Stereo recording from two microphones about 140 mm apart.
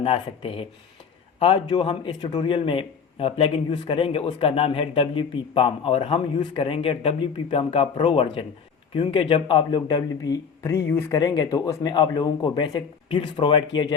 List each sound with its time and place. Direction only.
0.0 s a man's voice: 40° left (ahead or behind)